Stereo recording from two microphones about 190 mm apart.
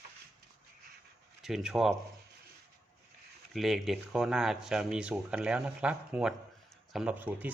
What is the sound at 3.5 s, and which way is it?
Speech, centre (ahead or behind).